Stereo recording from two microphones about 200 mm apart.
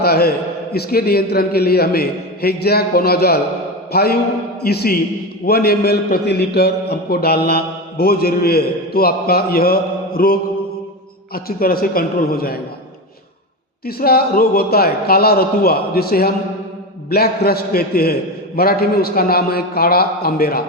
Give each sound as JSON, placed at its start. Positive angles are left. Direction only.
{"t": 0.0, "sound": "a man's voice", "side_deg": 50}
{"t": 11.3, "sound": "a man's voice", "side_deg": 50}
{"t": 13.8, "sound": "a man's voice", "side_deg": 50}